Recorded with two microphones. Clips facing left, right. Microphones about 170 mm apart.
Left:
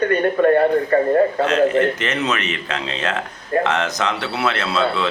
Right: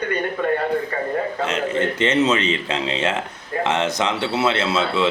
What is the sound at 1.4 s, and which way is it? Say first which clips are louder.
Speech: left 6 dB; 25° right (ahead or behind).